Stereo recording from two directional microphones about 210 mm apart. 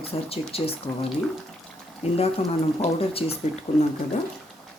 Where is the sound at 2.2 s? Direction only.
30° left (ahead or behind).